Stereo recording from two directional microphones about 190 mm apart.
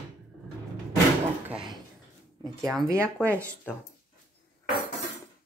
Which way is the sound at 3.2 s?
15° right (ahead or behind).